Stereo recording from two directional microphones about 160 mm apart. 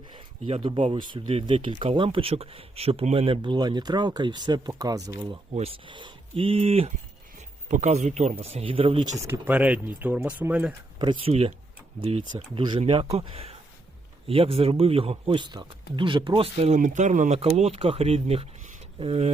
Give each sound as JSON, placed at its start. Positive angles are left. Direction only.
{"t": 0.1, "sound": "speech", "side_deg": -35}
{"t": 5.5, "sound": "speech", "side_deg": -35}
{"t": 9.2, "sound": "speech", "side_deg": -10}
{"t": 11.0, "sound": "speech", "side_deg": -35}
{"t": 12.5, "sound": "speech", "side_deg": -30}